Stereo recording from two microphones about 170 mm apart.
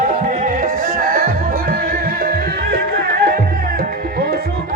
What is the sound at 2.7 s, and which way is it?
Music, 65° right (ahead or behind).